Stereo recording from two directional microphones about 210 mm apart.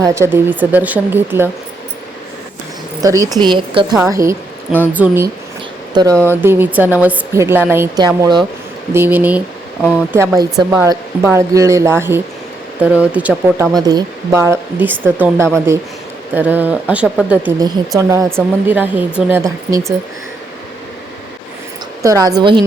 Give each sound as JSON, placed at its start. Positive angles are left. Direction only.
{"t": 0.0, "sound": "a woman's voice", "side_deg": -10}
{"t": 3.0, "sound": "a woman's voice", "side_deg": -15}
{"t": 5.9, "sound": "a woman's voice", "side_deg": -20}
{"t": 8.9, "sound": "a woman's voice", "side_deg": -10}
{"t": 13.7, "sound": "a woman's voice", "side_deg": -20}
{"t": 17.6, "sound": "a woman's voice", "side_deg": -15}
{"t": 22.0, "sound": "a woman's voice", "side_deg": -15}